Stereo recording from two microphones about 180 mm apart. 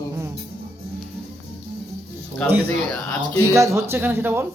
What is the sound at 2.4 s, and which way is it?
Speech, 5° left (ahead or behind).